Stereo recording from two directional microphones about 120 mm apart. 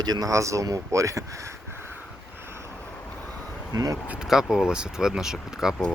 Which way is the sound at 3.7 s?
30° right (ahead or behind).